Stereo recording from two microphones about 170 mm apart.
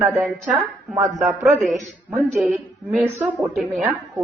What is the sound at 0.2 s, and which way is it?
Speech, centre (ahead or behind).